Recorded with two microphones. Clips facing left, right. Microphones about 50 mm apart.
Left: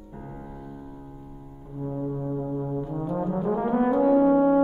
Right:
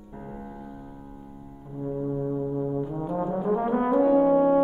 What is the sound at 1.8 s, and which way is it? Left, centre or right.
Brass instrument, centre.